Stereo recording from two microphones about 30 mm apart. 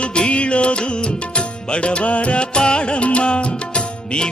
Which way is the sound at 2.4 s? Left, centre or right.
Left.